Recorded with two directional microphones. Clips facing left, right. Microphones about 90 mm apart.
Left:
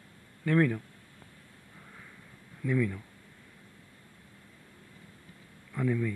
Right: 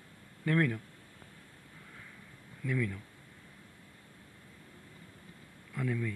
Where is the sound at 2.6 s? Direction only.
5° left (ahead or behind).